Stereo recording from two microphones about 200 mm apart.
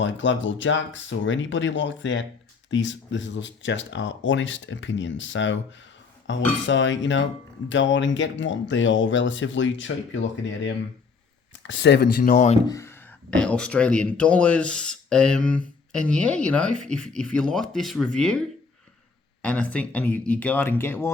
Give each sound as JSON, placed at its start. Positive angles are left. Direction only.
{"t": 0.0, "sound": "speech", "side_deg": 65}
{"t": 12.6, "sound": "speech", "side_deg": 15}
{"t": 19.4, "sound": "speech", "side_deg": 5}